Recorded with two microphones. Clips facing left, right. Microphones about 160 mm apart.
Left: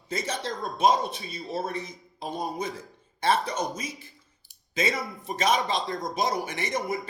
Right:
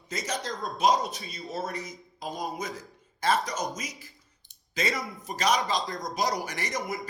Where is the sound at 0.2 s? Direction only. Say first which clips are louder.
Even; 25° left (ahead or behind).